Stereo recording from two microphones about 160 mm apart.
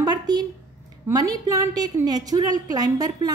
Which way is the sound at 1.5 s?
20° right (ahead or behind).